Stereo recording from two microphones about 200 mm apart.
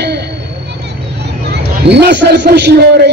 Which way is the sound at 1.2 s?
55° right (ahead or behind).